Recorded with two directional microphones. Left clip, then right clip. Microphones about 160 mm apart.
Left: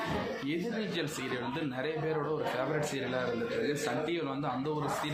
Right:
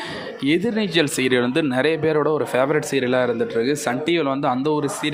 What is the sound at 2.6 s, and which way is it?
Speech, 70° right (ahead or behind).